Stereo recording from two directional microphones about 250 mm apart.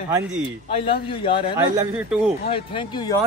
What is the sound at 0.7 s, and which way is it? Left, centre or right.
Speech, left.